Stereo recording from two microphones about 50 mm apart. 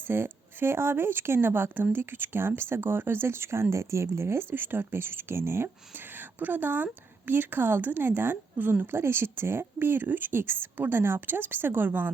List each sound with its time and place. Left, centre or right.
0.1 s speech: right